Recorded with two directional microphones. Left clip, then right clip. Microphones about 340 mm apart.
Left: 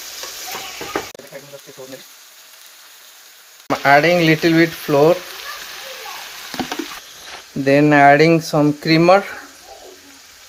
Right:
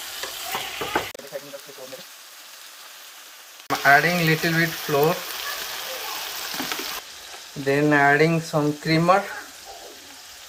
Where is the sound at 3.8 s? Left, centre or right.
Left.